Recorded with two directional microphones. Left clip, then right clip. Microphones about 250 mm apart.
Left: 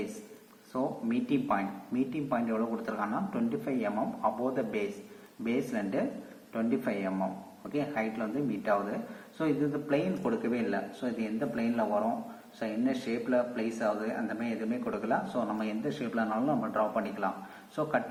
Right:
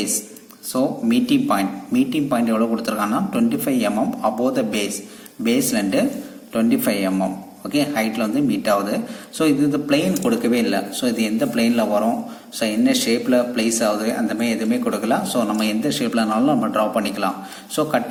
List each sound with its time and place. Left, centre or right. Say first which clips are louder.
0.7 s a man's voice: right 12 dB; right